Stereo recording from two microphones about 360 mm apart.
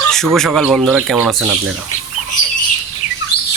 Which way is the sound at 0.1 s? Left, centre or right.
Centre.